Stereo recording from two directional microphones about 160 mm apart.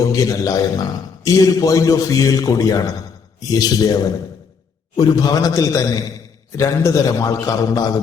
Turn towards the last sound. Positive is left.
turn(degrees=25)  # may be behind; listen again after turning